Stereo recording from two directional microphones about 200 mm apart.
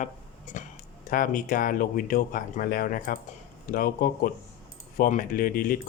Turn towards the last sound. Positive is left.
turn(degrees=45)  # may be behind; listen again after turning